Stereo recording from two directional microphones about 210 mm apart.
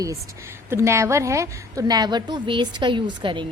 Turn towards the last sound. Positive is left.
turn(degrees=-25)  # may be behind; listen again after turning